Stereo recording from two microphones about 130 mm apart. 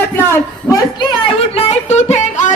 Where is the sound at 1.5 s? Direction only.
50° left (ahead or behind).